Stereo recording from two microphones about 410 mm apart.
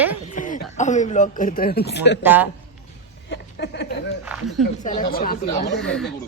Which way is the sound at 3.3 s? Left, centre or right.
Left.